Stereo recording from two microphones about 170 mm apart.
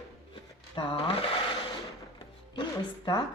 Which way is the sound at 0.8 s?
30° left (ahead or behind).